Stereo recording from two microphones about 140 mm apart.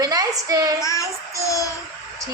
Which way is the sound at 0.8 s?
20° left (ahead or behind).